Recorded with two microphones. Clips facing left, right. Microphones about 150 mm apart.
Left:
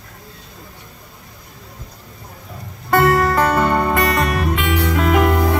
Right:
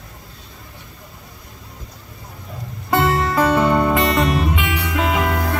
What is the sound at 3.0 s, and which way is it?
Music, 50° left (ahead or behind).